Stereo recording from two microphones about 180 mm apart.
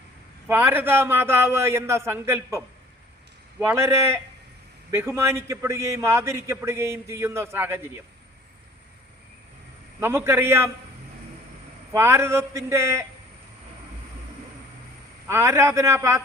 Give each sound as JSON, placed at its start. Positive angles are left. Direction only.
{"t": 0.4, "sound": "a man's voice", "side_deg": -10}
{"t": 3.6, "sound": "a man's voice", "side_deg": -15}
{"t": 10.0, "sound": "a man's voice", "side_deg": -15}
{"t": 11.9, "sound": "a man's voice", "side_deg": -15}
{"t": 15.3, "sound": "a man's voice", "side_deg": -15}